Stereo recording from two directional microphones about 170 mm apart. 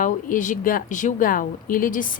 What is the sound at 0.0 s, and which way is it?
Speech, 50° left (ahead or behind).